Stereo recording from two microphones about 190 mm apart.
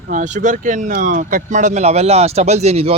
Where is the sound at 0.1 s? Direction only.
40° right (ahead or behind).